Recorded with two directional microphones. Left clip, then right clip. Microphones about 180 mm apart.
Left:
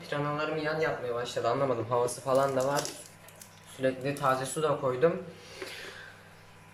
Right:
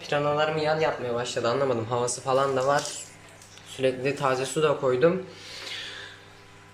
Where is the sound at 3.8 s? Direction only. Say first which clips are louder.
Right 4 dB; 5° right (ahead or behind).